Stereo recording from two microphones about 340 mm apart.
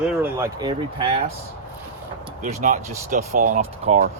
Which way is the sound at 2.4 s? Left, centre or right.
Right.